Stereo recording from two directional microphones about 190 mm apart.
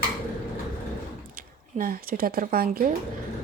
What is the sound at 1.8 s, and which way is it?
Speech, 50° right (ahead or behind).